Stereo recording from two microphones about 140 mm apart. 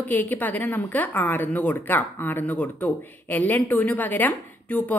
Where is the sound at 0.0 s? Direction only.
15° left (ahead or behind).